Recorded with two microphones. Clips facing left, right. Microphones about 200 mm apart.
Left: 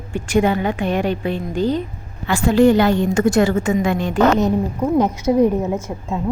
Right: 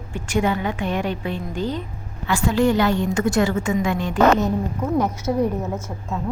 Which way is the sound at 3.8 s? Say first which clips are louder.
Even; 70° left (ahead or behind).